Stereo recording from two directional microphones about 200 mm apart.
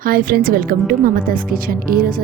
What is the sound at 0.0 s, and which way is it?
Speech, 45° right (ahead or behind).